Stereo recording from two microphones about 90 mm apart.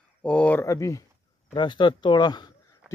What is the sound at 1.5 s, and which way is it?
Speech, 60° left (ahead or behind).